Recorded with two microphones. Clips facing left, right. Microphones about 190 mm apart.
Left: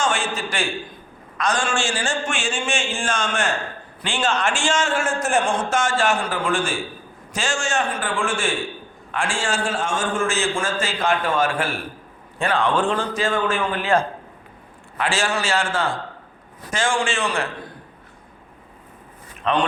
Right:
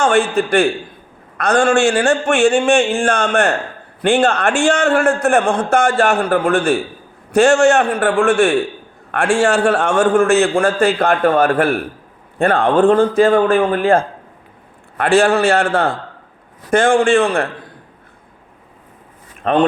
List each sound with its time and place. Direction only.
0.0 s a man's voice: 60° right (ahead or behind)
19.4 s speech: 50° right (ahead or behind)